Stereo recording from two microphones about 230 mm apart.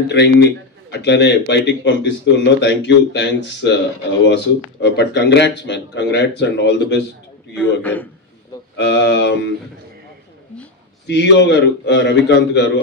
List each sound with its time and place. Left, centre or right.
0.1 s speech: left
7.8 s a man's voice: centre
8.7 s speech: left
11.1 s speech: left